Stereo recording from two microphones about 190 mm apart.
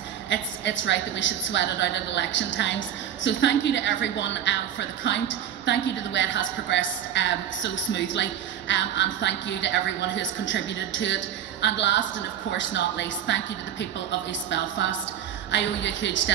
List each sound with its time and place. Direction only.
0.3 s a woman's voice: 70° left (ahead or behind)